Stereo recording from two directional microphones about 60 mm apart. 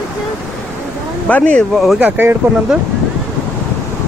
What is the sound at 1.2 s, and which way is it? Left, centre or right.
Speech, left.